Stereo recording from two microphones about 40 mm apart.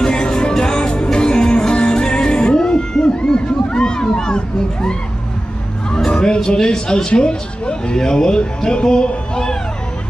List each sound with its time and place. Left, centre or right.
0.0 s music: centre
5.9 s music: centre
7.1 s speech: left